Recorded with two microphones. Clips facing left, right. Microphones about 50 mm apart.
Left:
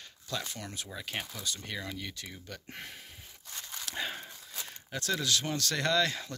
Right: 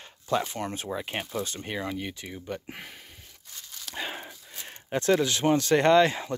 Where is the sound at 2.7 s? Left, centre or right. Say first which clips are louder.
Right 2 dB; centre.